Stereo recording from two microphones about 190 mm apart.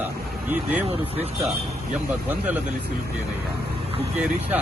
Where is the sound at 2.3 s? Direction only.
10° right (ahead or behind).